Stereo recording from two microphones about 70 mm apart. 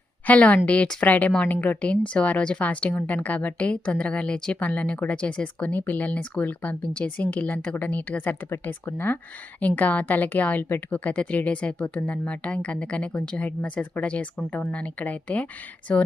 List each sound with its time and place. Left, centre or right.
0.3 s a woman's voice: left